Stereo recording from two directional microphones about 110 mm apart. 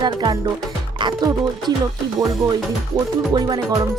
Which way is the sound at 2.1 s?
30° right (ahead or behind).